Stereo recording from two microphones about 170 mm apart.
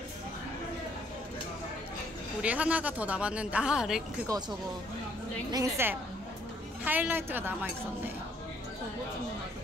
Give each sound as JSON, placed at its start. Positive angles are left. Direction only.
{"t": 2.4, "sound": "a woman's voice", "side_deg": -10}
{"t": 5.5, "sound": "a woman's voice", "side_deg": -15}